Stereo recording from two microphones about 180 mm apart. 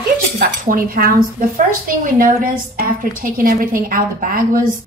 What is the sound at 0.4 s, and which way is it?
Speech, 55° right (ahead or behind).